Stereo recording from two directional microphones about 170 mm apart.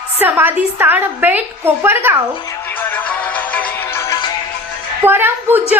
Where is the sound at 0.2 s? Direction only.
10° right (ahead or behind).